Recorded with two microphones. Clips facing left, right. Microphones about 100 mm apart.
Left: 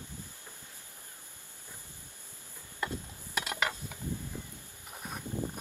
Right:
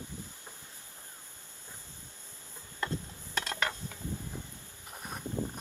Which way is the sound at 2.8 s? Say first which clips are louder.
Right 1 dB; 15° left (ahead or behind).